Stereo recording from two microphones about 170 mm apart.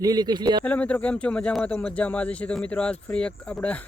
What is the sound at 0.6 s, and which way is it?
Speech, 10° left (ahead or behind).